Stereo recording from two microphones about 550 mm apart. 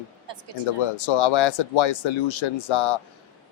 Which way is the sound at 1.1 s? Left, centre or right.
Left.